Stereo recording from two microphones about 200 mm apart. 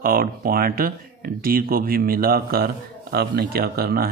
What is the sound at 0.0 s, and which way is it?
A man's voice, 45° right (ahead or behind).